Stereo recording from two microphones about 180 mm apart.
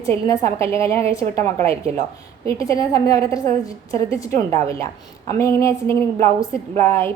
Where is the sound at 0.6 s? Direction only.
15° left (ahead or behind).